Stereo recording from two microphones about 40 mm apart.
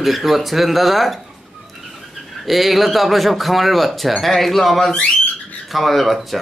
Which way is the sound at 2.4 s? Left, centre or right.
Centre.